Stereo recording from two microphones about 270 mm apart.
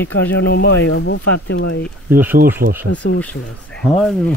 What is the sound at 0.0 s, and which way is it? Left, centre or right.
Speech, left.